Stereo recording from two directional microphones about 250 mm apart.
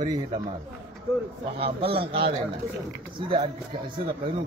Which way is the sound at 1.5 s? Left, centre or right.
Right.